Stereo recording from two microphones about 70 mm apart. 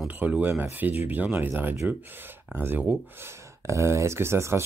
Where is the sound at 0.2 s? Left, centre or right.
Right.